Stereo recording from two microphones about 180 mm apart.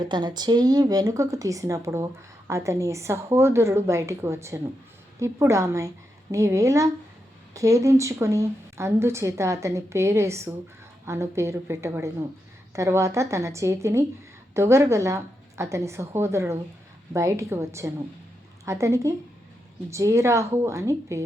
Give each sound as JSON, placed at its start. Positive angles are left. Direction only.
{"t": 0.0, "sound": "a woman's voice", "side_deg": -25}